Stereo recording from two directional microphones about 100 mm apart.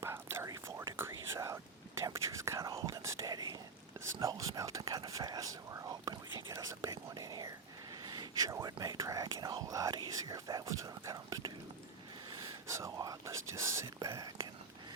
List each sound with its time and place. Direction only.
0.0 s whispering: 25° right (ahead or behind)
8.0 s speech: 45° right (ahead or behind)
10.2 s whispering: 40° right (ahead or behind)
12.6 s whispering: 30° right (ahead or behind)